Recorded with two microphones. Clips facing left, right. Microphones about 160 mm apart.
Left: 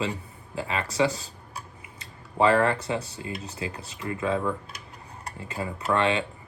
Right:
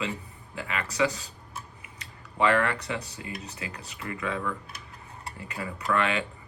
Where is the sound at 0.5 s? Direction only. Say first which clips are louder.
Left 4 dB; 35° left (ahead or behind).